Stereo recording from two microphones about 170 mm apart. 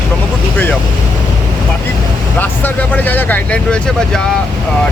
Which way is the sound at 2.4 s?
10° left (ahead or behind).